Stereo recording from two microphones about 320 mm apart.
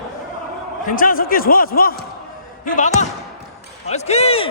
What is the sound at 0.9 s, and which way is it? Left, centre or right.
Speech, left.